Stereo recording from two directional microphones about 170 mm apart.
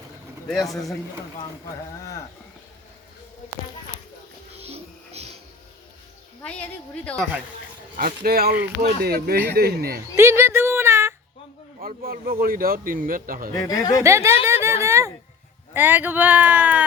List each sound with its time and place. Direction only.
0.4 s speech: centre (ahead or behind)
4.6 s music: 40° right (ahead or behind)
6.4 s a woman's voice: 5° left (ahead or behind)
7.9 s a man's voice: 60° right (ahead or behind)
10.2 s a sound: 15° right (ahead or behind)
11.8 s a man's voice: 60° right (ahead or behind)
13.7 s speech: 20° left (ahead or behind)
14.0 s speech: 15° right (ahead or behind)